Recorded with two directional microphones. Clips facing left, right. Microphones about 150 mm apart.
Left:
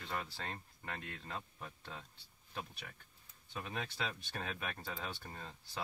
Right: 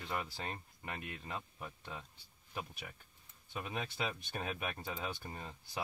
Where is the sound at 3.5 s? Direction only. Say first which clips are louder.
Right 2 dB; 15° right (ahead or behind).